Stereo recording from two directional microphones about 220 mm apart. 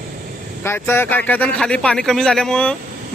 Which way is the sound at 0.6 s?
10° left (ahead or behind).